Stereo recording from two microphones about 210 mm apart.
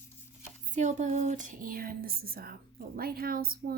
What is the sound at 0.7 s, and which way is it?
Speech, 35° right (ahead or behind).